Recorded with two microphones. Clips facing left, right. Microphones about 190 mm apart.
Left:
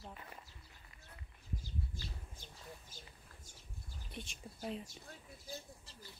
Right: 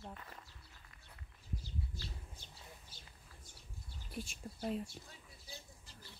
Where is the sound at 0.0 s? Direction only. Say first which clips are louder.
Right 1 dB; 5° left (ahead or behind).